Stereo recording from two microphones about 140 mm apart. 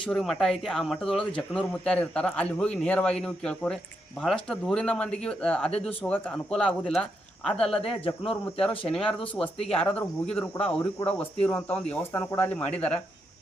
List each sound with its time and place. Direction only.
0.0 s speech: 5° left (ahead or behind)
7.8 s speech: 40° left (ahead or behind)
9.1 s speech: 10° left (ahead or behind)
9.6 s speech: 45° left (ahead or behind)
9.8 s speech: 10° left (ahead or behind)